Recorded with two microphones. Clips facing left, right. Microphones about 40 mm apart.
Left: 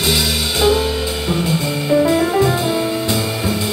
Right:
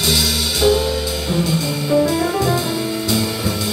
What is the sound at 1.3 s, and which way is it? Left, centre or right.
Music, left.